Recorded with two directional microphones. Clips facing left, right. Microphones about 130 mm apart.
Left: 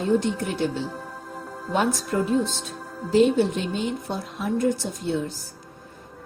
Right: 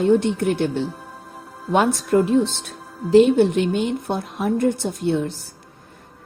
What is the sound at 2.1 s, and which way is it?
A woman's voice, 55° right (ahead or behind).